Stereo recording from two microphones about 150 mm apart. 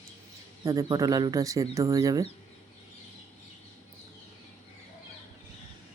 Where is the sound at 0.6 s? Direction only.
25° right (ahead or behind).